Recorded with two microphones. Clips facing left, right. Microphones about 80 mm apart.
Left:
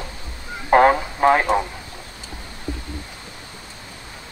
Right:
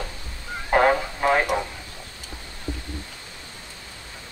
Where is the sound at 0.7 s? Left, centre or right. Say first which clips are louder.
Left 5 dB; left.